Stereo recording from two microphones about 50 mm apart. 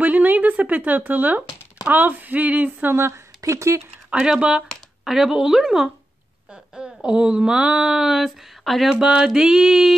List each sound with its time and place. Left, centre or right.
0.0 s speech: right
2.9 s speech: right
4.2 s a woman's voice: centre
6.5 s speech: centre
8.6 s speech: centre
8.9 s mantra: centre
9.3 s a woman's voice: centre